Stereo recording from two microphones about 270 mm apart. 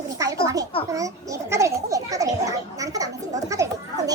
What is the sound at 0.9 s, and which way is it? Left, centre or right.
A child's voice, centre.